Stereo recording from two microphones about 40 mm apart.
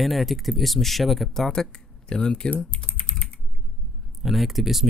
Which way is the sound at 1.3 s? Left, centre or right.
Centre.